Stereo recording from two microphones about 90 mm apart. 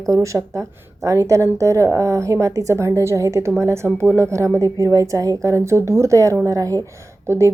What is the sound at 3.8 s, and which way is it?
Speech, 20° left (ahead or behind).